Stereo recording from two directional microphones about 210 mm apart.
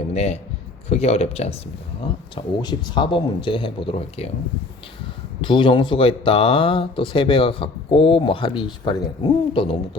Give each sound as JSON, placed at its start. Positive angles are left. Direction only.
{"t": 0.1, "sound": "speech", "side_deg": 30}
{"t": 5.4, "sound": "speech", "side_deg": 25}